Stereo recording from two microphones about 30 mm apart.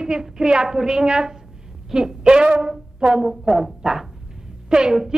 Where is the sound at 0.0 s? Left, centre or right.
Right.